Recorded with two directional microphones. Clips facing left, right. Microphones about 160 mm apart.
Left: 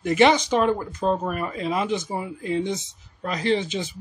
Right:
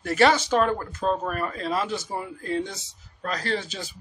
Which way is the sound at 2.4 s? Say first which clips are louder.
Left 4 dB; 20° left (ahead or behind).